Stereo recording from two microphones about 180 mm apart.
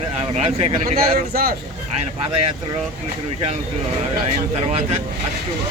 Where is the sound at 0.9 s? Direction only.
55° right (ahead or behind).